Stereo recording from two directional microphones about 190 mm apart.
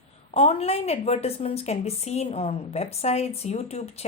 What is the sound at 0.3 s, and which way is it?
Speech, 35° left (ahead or behind).